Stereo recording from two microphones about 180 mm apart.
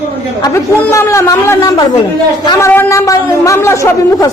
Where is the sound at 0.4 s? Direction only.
15° left (ahead or behind).